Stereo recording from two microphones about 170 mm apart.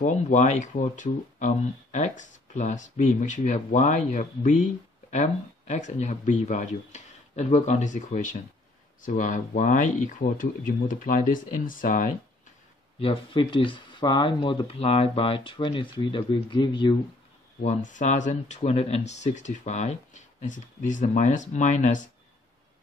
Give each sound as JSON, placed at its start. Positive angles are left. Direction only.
{"t": 0.0, "sound": "speech", "side_deg": 45}
{"t": 13.0, "sound": "speech", "side_deg": 30}
{"t": 17.6, "sound": "speech", "side_deg": 45}